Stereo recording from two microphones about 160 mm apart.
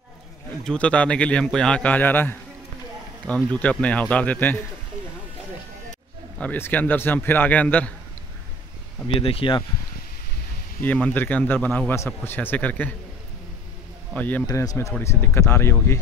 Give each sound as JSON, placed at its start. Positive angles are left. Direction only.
{"t": 0.7, "sound": "a man's voice", "side_deg": 5}
{"t": 6.3, "sound": "a man's voice", "side_deg": 10}
{"t": 9.0, "sound": "speech", "side_deg": 35}
{"t": 10.8, "sound": "a man's voice", "side_deg": 10}
{"t": 14.1, "sound": "a man's voice", "side_deg": 10}
{"t": 14.4, "sound": "a man's voice", "side_deg": 20}